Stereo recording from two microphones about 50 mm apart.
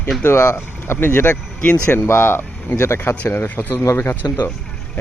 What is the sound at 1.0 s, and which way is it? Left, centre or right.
Speech, left.